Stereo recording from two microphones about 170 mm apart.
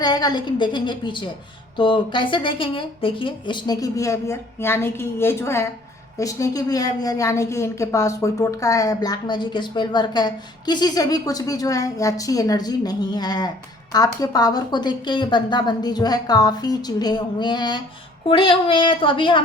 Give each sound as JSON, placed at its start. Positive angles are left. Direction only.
{"t": 0.0, "sound": "a woman's voice", "side_deg": 25}